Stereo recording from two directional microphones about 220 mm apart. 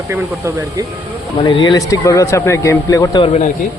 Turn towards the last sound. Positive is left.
turn(degrees=15)  # may be behind; listen again after turning